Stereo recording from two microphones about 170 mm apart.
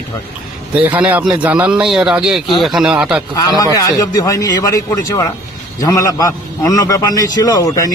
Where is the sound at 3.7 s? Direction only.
20° left (ahead or behind).